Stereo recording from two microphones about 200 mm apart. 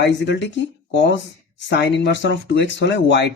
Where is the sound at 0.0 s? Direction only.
60° left (ahead or behind).